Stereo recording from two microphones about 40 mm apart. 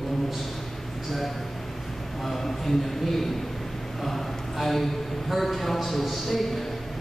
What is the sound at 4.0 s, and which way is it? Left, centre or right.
A man's voice, centre.